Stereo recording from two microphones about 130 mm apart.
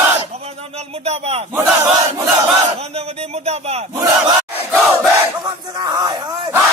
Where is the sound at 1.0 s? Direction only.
55° right (ahead or behind).